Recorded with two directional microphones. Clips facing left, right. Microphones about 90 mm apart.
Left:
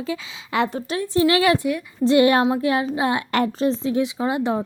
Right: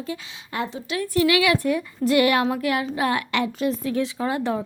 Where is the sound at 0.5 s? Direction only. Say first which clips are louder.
Left 6 dB; 90° left.